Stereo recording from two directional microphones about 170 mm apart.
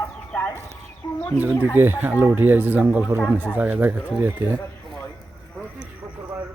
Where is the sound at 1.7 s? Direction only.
10° right (ahead or behind).